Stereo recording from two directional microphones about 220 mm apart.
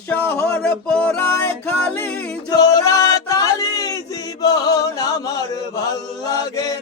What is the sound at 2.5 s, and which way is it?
Male singing, 15° left (ahead or behind).